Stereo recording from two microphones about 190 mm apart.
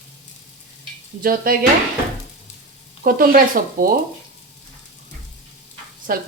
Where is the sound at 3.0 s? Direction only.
50° right (ahead or behind).